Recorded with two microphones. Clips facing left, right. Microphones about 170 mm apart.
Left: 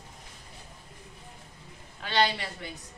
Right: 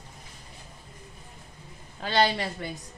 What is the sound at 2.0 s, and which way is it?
Speech, 40° right (ahead or behind).